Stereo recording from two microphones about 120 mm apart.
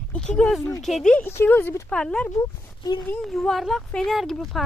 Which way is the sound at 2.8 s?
35° left (ahead or behind).